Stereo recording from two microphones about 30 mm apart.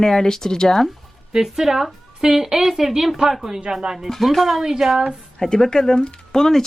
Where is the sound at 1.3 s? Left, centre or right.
Centre.